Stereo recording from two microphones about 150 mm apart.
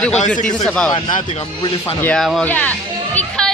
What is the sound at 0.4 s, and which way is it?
Speech, 5° left (ahead or behind).